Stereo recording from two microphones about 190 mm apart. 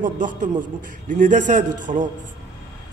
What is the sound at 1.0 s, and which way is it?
Speech, 40° right (ahead or behind).